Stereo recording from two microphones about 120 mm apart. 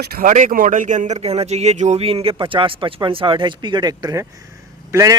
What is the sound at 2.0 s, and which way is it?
A man's voice, 55° right (ahead or behind).